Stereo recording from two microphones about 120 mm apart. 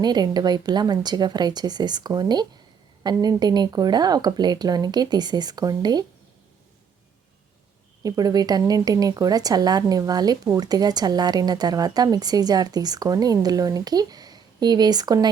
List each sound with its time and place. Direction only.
0.0 s a woman's voice: 35° right (ahead or behind)
8.0 s a woman's voice: 30° right (ahead or behind)